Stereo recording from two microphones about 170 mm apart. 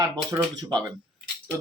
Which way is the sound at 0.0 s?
20° right (ahead or behind).